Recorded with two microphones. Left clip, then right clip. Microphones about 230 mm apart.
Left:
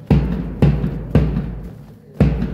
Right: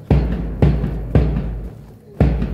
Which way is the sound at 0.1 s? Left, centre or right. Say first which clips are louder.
Left 1 dB; left.